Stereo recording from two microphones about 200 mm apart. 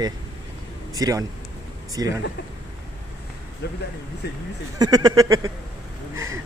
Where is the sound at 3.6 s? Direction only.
55° left (ahead or behind).